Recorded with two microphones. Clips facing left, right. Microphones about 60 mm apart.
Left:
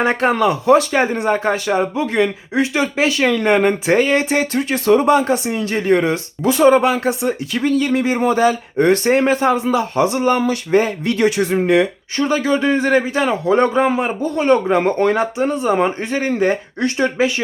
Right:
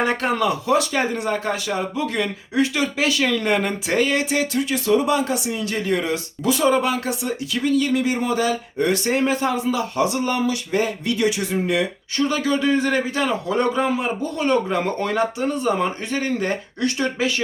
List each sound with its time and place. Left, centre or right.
0.0 s speech: left
12.2 s speech: left
15.2 s speech: left